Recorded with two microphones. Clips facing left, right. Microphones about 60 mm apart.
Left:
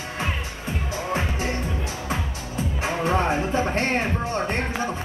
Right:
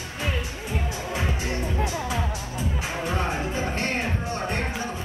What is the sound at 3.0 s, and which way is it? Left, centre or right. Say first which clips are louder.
Music: left 6 dB; left.